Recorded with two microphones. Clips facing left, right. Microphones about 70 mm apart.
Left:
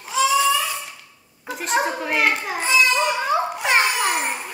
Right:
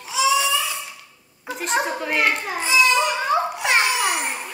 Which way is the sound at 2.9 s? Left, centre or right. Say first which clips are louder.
Even; centre.